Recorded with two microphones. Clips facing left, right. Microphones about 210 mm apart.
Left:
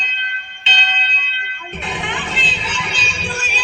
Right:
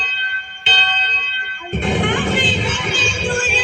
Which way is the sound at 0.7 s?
55° right (ahead or behind).